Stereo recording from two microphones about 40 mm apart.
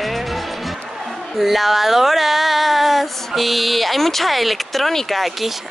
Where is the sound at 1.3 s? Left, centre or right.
Centre.